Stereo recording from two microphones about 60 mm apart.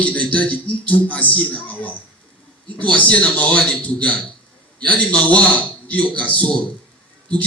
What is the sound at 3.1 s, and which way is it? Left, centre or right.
Speech, left.